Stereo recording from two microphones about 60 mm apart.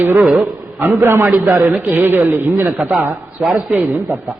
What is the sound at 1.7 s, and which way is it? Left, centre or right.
Speech, right.